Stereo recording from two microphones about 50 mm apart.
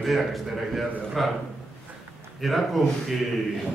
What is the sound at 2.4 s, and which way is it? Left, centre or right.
Speech, centre.